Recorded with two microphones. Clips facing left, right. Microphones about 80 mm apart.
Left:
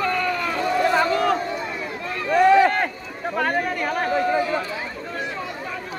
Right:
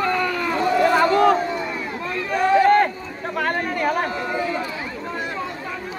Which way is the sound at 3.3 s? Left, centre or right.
Centre.